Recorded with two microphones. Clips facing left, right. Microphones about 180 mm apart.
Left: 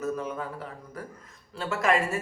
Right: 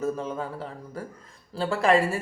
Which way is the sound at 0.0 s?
30° right (ahead or behind).